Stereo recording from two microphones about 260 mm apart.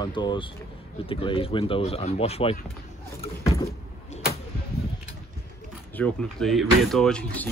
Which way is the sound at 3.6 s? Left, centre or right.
Left.